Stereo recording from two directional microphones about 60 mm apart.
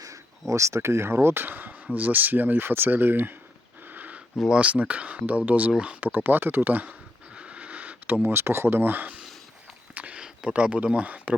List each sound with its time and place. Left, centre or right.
0.0 s speech: right
3.8 s a sound: right
4.4 s speech: centre
6.1 s speech: right
7.3 s a sound: centre
8.3 s speech: right
9.9 s walk: right
10.2 s a sound: centre
10.5 s speech: right